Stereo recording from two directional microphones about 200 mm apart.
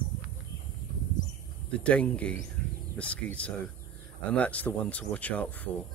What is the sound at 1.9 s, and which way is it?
Speech, 5° left (ahead or behind).